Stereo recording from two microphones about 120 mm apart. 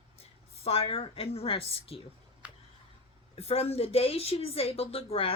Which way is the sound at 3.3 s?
55° left (ahead or behind).